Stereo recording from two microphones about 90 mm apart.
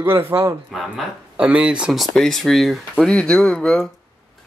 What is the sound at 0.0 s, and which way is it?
Speech, 25° right (ahead or behind).